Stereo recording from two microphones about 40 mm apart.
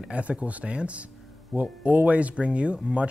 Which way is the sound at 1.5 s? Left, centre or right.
Centre.